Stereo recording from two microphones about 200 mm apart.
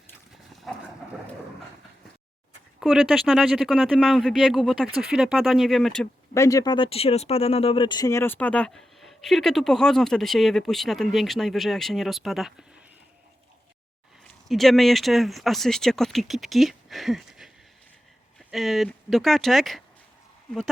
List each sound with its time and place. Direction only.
2.8 s speech: centre (ahead or behind)
6.3 s speech: 15° left (ahead or behind); by 12.6 s centre (ahead or behind)
14.4 s speech: centre (ahead or behind)